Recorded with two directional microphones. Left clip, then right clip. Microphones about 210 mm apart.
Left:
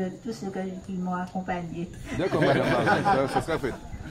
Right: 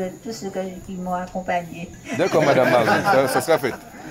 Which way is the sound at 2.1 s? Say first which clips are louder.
Right 7 dB; 50° right (ahead or behind).